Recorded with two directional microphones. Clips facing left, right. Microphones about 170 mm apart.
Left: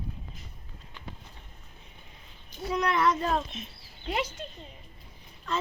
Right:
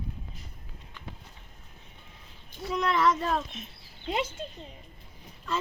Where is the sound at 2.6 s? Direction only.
Centre (ahead or behind).